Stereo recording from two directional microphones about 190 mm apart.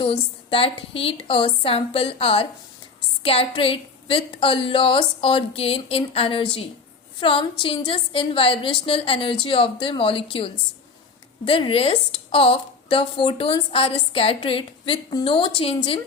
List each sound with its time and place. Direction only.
0.0 s a woman's voice: 30° left (ahead or behind)